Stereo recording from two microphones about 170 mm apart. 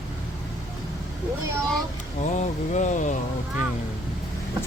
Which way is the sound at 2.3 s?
45° left (ahead or behind).